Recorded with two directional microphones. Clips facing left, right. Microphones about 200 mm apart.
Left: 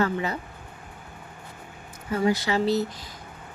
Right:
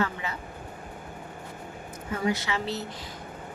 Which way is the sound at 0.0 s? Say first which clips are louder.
Left 5 dB; 40° left (ahead or behind).